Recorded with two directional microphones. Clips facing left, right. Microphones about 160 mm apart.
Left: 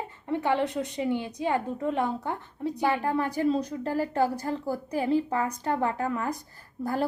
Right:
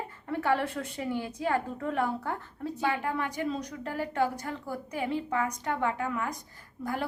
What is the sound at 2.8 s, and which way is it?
A woman's voice, 35° left (ahead or behind).